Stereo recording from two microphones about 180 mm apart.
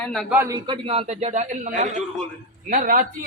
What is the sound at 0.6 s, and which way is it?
A man's voice, 30° right (ahead or behind).